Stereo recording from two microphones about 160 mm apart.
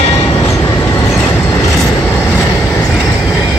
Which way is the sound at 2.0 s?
10° left (ahead or behind).